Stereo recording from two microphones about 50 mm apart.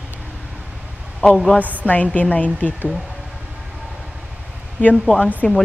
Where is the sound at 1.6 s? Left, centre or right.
Right.